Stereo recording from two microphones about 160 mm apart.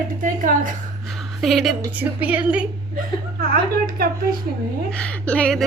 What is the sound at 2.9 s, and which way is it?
Speech, 65° right (ahead or behind).